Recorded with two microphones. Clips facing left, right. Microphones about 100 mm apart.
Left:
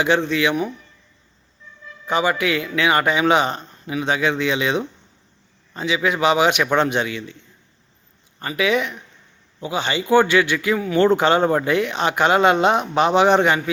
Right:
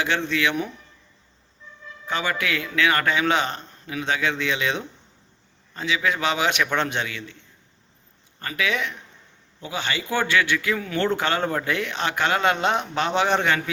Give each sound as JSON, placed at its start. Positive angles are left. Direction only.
{"t": 0.0, "sound": "a man's voice", "side_deg": 15}
{"t": 2.0, "sound": "a man's voice", "side_deg": 15}
{"t": 8.4, "sound": "a man's voice", "side_deg": 20}